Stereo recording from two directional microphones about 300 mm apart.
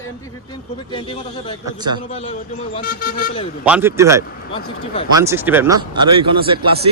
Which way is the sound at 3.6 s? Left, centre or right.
Centre.